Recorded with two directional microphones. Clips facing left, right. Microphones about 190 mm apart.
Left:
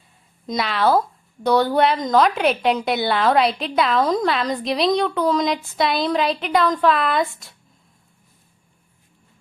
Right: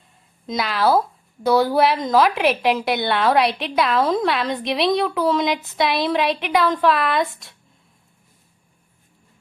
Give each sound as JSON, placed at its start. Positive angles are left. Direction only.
{"t": 0.4, "sound": "a woman's voice", "side_deg": 0}